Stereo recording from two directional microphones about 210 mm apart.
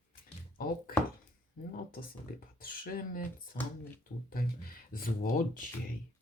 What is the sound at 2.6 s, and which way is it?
Speech, 45° left (ahead or behind).